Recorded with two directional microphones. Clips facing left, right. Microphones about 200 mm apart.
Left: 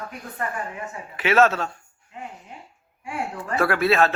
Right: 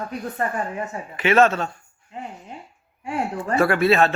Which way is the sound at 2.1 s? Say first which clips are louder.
Right 3 dB; 30° right (ahead or behind).